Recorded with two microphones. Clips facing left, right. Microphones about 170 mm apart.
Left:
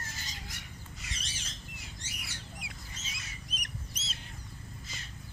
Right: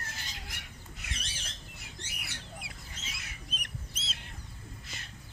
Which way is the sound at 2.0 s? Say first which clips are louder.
Even; 60° right (ahead or behind).